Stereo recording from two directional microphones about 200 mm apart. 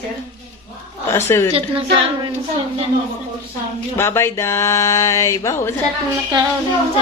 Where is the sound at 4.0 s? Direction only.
15° left (ahead or behind).